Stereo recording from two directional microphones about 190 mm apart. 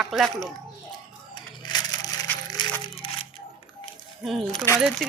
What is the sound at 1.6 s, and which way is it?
Music, 20° left (ahead or behind).